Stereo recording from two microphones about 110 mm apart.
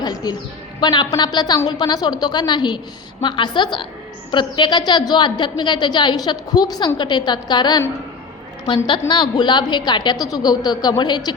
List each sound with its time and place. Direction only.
0.0 s a woman's voice: 35° left (ahead or behind)
8.9 s a woman's voice: 45° left (ahead or behind)